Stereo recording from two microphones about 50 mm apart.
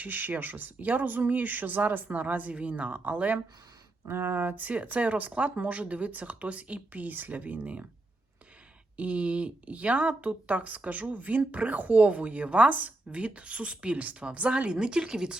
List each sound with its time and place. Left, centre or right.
0.0 s speech: right
4.0 s speech: right
9.0 s speech: right